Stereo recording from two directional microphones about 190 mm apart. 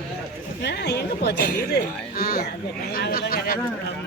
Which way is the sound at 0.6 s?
60° left (ahead or behind).